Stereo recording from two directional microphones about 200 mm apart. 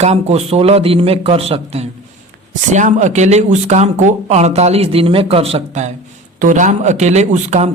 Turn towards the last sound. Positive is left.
turn(degrees=-35)  # may be behind; listen again after turning